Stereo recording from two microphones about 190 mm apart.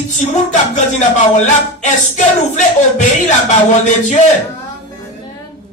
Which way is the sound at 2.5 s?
40° left (ahead or behind).